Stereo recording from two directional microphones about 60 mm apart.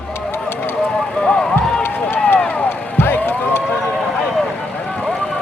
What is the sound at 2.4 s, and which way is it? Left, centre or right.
Music, left.